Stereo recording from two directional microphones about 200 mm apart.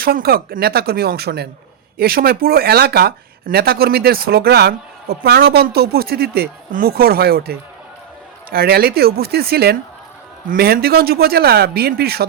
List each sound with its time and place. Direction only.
0.0 s speech: 50° right (ahead or behind)